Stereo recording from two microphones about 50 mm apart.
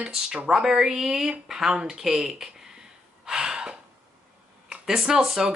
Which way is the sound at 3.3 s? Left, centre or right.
Centre.